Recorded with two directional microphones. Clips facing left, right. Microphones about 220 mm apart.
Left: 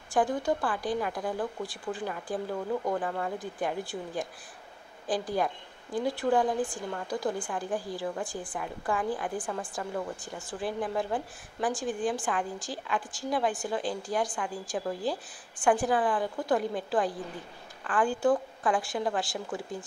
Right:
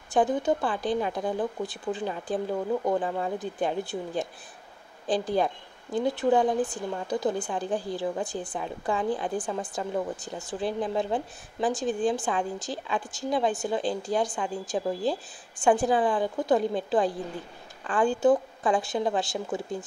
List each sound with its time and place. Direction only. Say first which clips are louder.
0.1 s speech: right 3 dB; 20° right (ahead or behind)